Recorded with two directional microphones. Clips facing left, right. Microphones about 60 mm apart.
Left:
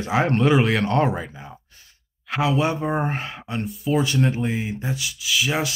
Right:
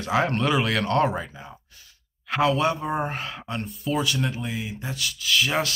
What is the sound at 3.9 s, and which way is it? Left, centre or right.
Speech, left.